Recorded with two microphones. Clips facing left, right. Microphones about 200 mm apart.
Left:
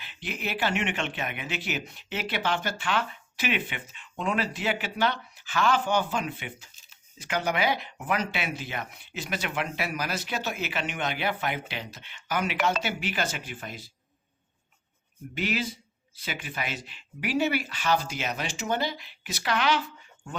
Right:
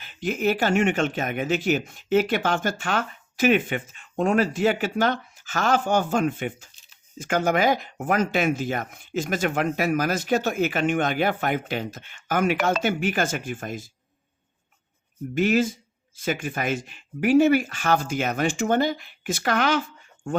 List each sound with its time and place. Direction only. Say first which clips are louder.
0.0 s speech: right 11 dB; 45° right (ahead or behind)
15.4 s speech: right 9 dB; 45° right (ahead or behind)